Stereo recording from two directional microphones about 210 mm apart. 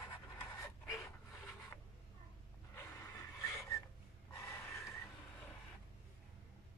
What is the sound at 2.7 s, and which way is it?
Snort, 10° left (ahead or behind).